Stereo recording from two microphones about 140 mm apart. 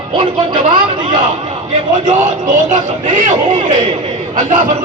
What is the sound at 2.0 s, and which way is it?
A man's voice, 65° right (ahead or behind).